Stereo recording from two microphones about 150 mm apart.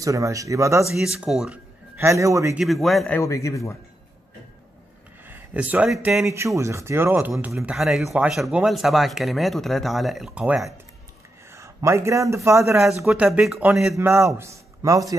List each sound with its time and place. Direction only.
0.0 s a man's voice: 20° right (ahead or behind)
0.9 s speech: 5° right (ahead or behind)
2.0 s a man's voice: 20° right (ahead or behind)
2.5 s speech: centre (ahead or behind)
3.2 s speech: 20° left (ahead or behind)
5.2 s speech: 10° right (ahead or behind)
6.2 s speech: 20° right (ahead or behind)
11.5 s speech: 20° right (ahead or behind)
13.0 s speech: 5° right (ahead or behind)
13.9 s a man's voice: 15° right (ahead or behind)